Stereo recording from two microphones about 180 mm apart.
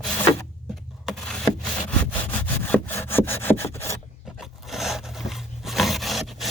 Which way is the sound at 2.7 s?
10° left (ahead or behind).